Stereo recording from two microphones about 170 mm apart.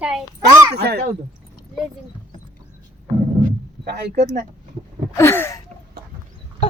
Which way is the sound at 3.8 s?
75° right (ahead or behind).